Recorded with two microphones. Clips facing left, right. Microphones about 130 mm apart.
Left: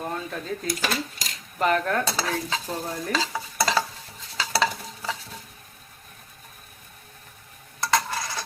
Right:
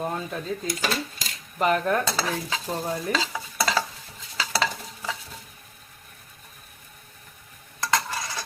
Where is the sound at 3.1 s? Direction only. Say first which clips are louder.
Left 1 dB; centre (ahead or behind).